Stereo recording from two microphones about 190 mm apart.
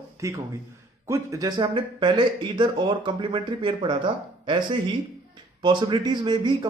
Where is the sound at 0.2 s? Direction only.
15° right (ahead or behind).